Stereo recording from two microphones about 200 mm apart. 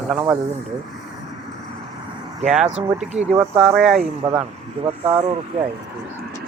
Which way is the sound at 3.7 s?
Centre (ahead or behind).